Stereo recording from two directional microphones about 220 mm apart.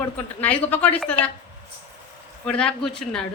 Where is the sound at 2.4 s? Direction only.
5° left (ahead or behind).